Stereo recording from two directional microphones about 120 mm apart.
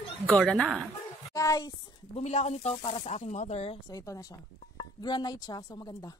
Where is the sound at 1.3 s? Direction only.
30° left (ahead or behind).